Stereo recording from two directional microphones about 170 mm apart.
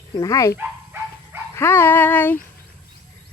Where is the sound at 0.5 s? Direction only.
10° right (ahead or behind).